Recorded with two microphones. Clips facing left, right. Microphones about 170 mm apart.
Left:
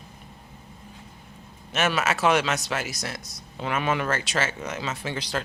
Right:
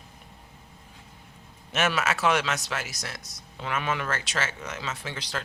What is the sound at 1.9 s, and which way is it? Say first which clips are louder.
Speech: left 5 dB; 5° left (ahead or behind).